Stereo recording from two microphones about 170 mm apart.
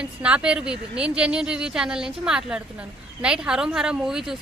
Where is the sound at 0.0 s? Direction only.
5° right (ahead or behind).